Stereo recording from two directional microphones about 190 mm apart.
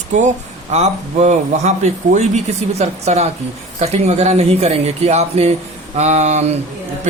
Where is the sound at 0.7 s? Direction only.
35° right (ahead or behind).